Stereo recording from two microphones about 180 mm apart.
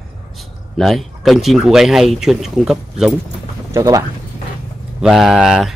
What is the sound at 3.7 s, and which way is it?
Speech, 20° right (ahead or behind).